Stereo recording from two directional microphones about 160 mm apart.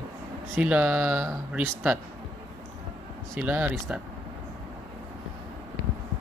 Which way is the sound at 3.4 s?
10° right (ahead or behind).